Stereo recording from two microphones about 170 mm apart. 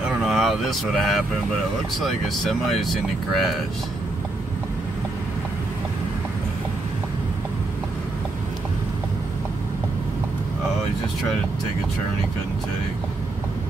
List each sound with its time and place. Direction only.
0.2 s speech: centre (ahead or behind)